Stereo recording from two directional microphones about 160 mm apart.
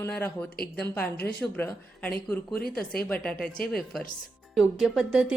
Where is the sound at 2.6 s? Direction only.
70° left (ahead or behind).